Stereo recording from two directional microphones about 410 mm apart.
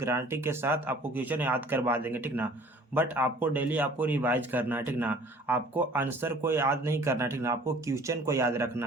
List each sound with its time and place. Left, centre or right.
0.0 s a man's voice: centre